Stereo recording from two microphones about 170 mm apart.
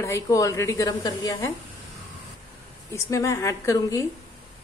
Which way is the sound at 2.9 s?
15° left (ahead or behind).